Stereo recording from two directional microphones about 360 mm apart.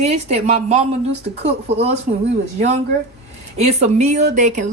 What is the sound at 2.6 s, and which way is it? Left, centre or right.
Speech, centre.